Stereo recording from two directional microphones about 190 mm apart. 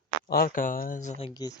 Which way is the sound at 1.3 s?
20° left (ahead or behind).